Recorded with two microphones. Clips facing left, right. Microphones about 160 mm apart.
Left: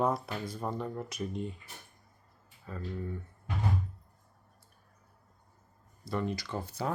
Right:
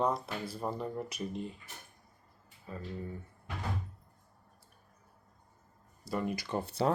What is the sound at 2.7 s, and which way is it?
Speech, 10° right (ahead or behind).